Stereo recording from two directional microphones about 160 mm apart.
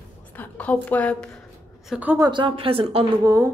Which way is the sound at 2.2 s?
30° right (ahead or behind).